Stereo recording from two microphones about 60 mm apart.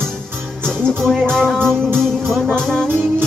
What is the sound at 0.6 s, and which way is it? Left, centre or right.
Music, centre.